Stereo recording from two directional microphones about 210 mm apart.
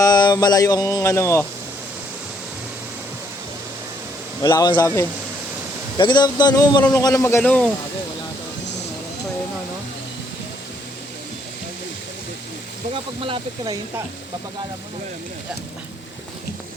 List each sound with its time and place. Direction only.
0.0 s speech: 20° left (ahead or behind)
4.4 s speech: 20° left (ahead or behind)
6.0 s a sound: 20° left (ahead or behind)
6.9 s speech: 15° left (ahead or behind)
12.9 s speech: 25° right (ahead or behind)